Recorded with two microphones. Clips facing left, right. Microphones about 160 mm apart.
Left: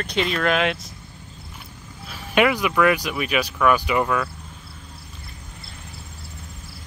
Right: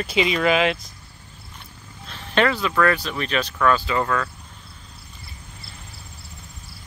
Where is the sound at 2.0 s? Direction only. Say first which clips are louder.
Left 1 dB; 10° left (ahead or behind).